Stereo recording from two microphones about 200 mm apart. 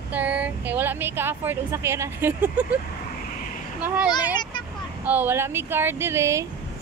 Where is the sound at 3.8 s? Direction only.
5° right (ahead or behind).